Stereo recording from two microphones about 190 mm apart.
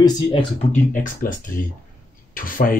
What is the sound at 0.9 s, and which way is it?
Speech, 45° left (ahead or behind).